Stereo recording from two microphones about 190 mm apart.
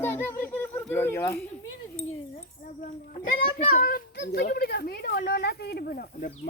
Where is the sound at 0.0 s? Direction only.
10° left (ahead or behind).